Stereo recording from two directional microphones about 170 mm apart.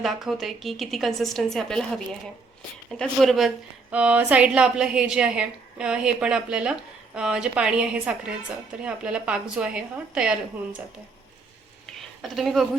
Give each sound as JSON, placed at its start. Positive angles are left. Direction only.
{"t": 0.0, "sound": "a woman's voice", "side_deg": 0}
{"t": 3.0, "sound": "a woman's voice", "side_deg": 0}
{"t": 11.9, "sound": "a sound", "side_deg": 0}